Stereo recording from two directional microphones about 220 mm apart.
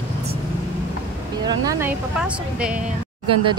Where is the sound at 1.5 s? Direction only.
15° right (ahead or behind).